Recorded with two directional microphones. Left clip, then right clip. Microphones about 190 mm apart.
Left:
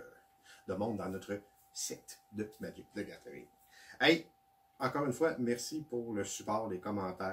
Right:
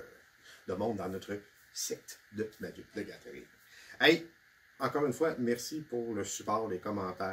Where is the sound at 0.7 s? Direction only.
15° right (ahead or behind).